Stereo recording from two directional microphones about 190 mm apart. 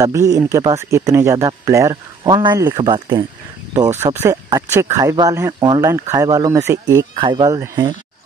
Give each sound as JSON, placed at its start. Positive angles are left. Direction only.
{"t": 0.0, "sound": "speech", "side_deg": -15}
{"t": 4.0, "sound": "speech", "side_deg": -10}